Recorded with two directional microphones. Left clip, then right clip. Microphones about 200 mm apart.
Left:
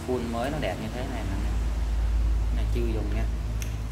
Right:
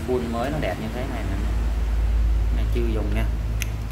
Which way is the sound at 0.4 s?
Centre (ahead or behind).